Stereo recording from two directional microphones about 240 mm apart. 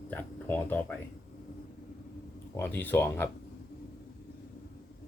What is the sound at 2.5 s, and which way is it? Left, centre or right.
Speech, centre.